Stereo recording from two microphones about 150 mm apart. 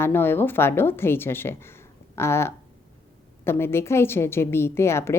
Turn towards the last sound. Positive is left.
turn(degrees=15)  # may be behind; listen again after turning